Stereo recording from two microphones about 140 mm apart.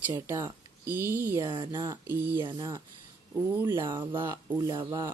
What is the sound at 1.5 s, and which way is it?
Speech, 35° right (ahead or behind).